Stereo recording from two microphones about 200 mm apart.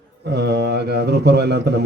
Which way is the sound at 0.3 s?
55° right (ahead or behind).